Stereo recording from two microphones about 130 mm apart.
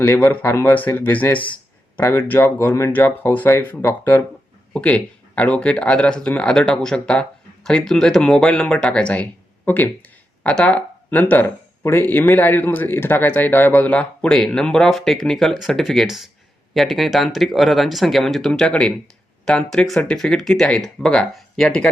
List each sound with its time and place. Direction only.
0.0 s speech: 15° left (ahead or behind)